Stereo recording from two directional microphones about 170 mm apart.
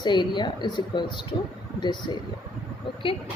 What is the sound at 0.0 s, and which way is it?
Speech, 25° left (ahead or behind).